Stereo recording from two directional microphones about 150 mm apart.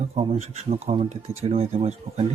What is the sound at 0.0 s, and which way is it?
Speech, 40° right (ahead or behind).